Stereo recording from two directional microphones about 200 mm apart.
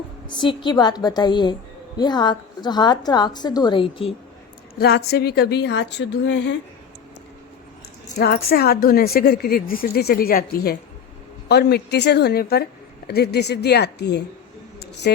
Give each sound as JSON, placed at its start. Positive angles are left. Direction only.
{"t": 0.3, "sound": "a woman's voice", "side_deg": 20}
{"t": 4.8, "sound": "a woman's voice", "side_deg": 50}
{"t": 8.2, "sound": "a woman's voice", "side_deg": 50}